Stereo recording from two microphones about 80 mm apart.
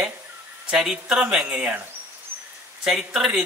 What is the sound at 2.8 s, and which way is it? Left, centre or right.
Speech, centre.